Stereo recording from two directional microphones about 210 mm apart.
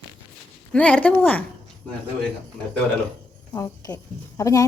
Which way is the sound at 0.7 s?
5° left (ahead or behind).